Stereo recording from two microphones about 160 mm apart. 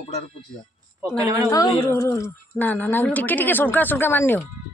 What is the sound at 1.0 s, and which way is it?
Speech, 20° right (ahead or behind).